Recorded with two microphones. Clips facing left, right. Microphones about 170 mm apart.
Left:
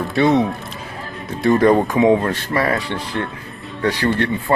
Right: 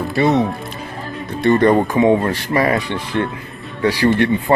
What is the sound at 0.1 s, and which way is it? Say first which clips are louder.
Speech: even; centre (ahead or behind).